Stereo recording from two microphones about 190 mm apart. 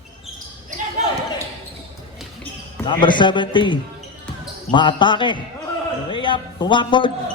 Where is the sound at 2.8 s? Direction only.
25° left (ahead or behind).